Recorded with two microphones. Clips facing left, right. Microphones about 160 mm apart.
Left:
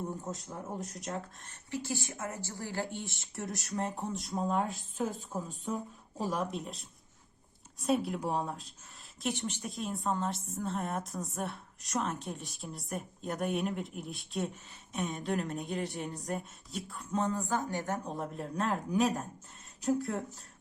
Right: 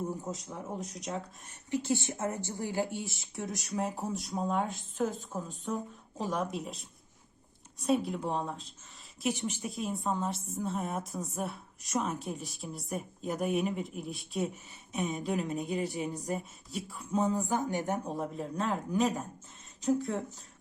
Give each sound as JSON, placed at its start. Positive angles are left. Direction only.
{"t": 0.0, "sound": "a woman's voice", "side_deg": 0}
{"t": 1.5, "sound": "speech", "side_deg": -20}
{"t": 3.0, "sound": "a woman's voice", "side_deg": 0}
{"t": 9.2, "sound": "a woman's voice", "side_deg": -5}
{"t": 18.0, "sound": "a woman's voice", "side_deg": 0}